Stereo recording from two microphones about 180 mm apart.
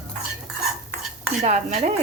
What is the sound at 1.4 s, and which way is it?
Dishes, 40° right (ahead or behind).